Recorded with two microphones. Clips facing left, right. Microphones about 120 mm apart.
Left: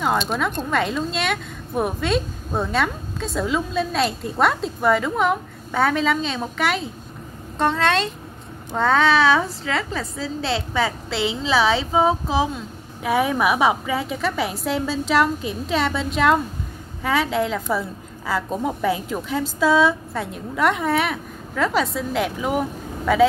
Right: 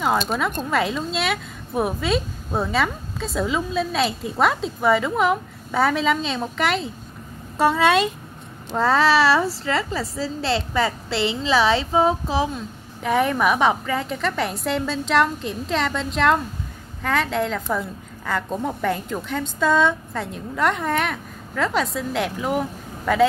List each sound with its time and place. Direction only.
0.0 s a woman's voice: centre (ahead or behind)